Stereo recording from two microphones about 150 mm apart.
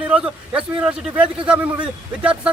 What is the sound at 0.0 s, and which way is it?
A man's voice, 10° right (ahead or behind).